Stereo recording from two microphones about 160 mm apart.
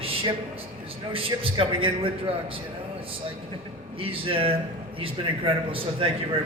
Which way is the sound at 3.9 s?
35° right (ahead or behind).